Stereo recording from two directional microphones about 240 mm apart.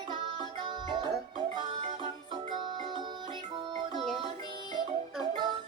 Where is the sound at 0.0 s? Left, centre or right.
Centre.